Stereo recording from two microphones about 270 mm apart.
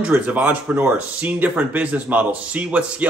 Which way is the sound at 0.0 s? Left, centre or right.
Centre.